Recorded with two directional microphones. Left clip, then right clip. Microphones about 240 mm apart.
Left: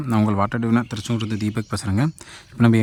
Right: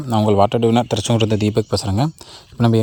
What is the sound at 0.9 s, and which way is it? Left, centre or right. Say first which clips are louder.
Speech: right 10 dB; centre.